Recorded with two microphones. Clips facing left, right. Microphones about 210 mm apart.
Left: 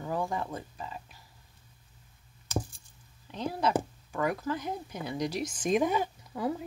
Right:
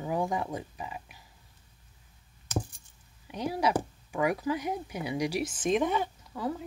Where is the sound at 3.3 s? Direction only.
10° right (ahead or behind).